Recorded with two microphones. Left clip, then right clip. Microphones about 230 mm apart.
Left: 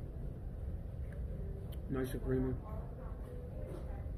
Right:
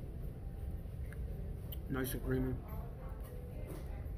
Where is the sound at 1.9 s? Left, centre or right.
Centre.